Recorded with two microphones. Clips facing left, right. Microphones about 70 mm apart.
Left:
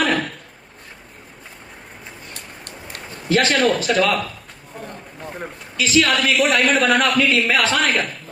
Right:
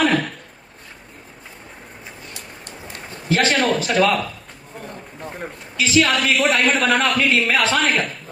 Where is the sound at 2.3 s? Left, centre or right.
Left.